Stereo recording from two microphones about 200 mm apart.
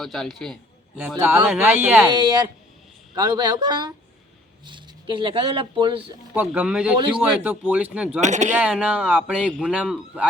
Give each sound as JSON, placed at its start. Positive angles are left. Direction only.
{"t": 0.0, "sound": "speech", "side_deg": 0}
{"t": 0.9, "sound": "a man's voice", "side_deg": -10}
{"t": 2.1, "sound": "speech", "side_deg": -20}
{"t": 6.3, "sound": "a man's voice", "side_deg": -5}
{"t": 8.2, "sound": "speech", "side_deg": -35}
{"t": 8.5, "sound": "a man's voice", "side_deg": -5}